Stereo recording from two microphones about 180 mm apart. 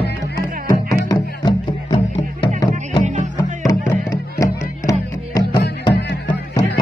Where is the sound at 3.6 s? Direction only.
15° left (ahead or behind).